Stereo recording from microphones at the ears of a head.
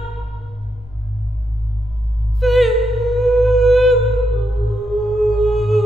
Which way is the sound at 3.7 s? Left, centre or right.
Centre.